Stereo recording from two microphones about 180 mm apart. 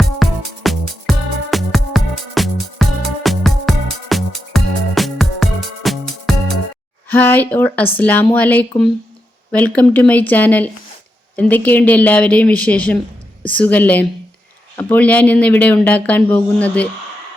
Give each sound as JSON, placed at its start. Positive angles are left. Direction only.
{"t": 0.2, "sound": "music", "side_deg": 0}
{"t": 7.1, "sound": "speech", "side_deg": 10}